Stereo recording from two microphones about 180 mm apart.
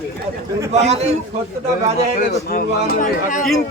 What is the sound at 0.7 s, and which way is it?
Speech, 35° right (ahead or behind).